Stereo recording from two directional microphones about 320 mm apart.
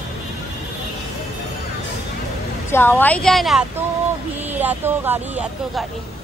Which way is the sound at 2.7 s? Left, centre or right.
Centre.